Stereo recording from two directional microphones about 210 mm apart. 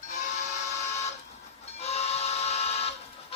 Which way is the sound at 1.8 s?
30° left (ahead or behind).